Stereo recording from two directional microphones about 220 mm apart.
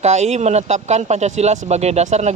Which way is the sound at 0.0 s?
30° right (ahead or behind).